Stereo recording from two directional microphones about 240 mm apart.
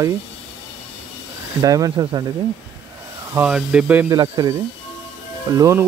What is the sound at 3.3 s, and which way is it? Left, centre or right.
Speech, centre.